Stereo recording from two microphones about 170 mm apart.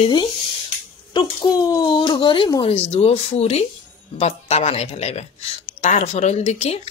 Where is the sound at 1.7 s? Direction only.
25° left (ahead or behind).